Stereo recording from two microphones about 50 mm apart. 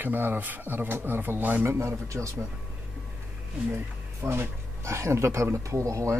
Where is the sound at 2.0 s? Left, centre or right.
Right.